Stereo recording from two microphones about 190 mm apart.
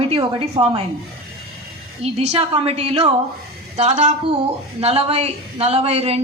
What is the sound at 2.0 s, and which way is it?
Speech, 35° right (ahead or behind).